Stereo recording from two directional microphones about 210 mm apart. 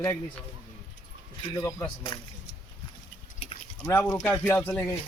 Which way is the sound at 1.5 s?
15° left (ahead or behind).